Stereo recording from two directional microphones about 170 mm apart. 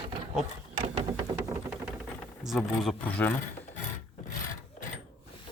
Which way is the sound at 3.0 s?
10° left (ahead or behind).